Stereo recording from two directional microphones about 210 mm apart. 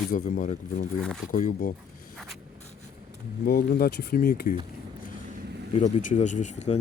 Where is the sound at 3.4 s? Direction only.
45° left (ahead or behind).